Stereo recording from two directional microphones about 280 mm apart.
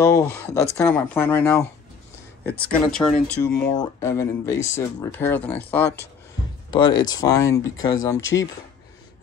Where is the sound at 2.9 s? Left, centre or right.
Centre.